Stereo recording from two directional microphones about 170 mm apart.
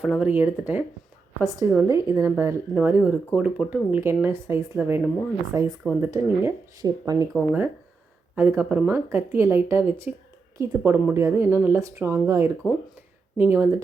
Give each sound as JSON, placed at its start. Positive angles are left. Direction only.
{"t": 0.0, "sound": "speech", "side_deg": -5}
{"t": 5.7, "sound": "speech", "side_deg": -5}
{"t": 6.0, "sound": "speech", "side_deg": -15}
{"t": 7.3, "sound": "speech", "side_deg": -10}